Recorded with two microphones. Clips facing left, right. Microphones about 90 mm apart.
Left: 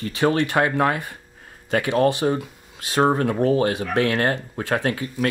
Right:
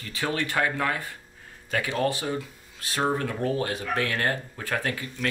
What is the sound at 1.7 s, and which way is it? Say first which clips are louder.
Speech: left 7 dB; 55° left (ahead or behind).